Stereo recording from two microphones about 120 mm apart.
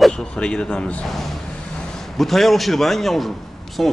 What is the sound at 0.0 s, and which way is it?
Speech, 5° left (ahead or behind).